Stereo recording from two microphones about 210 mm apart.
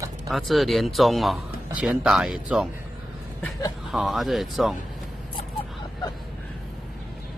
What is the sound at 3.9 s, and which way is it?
Speech, centre (ahead or behind).